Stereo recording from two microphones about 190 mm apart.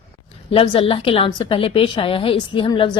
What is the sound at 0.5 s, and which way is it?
A woman's voice, 30° left (ahead or behind).